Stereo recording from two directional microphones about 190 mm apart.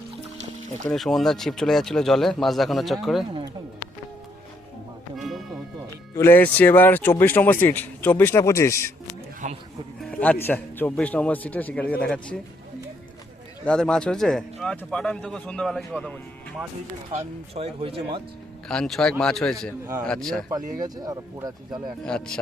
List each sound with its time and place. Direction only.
0.9 s a man's voice: centre (ahead or behind)
5.1 s music: centre (ahead or behind)
6.1 s a man's voice: 10° left (ahead or behind)
9.4 s speech: 40° right (ahead or behind)
10.0 s a man's voice: 5° left (ahead or behind)
13.7 s a man's voice: 5° left (ahead or behind)
17.2 s speech: 30° right (ahead or behind)
18.7 s a man's voice: 5° left (ahead or behind)
20.7 s speech: 20° right (ahead or behind)
22.0 s a man's voice: 5° left (ahead or behind)